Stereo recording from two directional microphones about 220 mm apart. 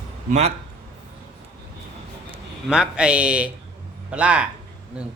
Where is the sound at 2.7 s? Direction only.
5° right (ahead or behind).